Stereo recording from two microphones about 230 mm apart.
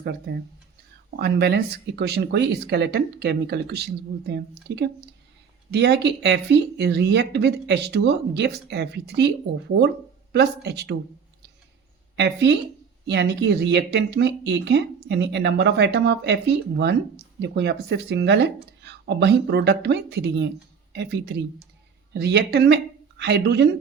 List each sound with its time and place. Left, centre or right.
0.0 s speech: right
12.1 s speech: right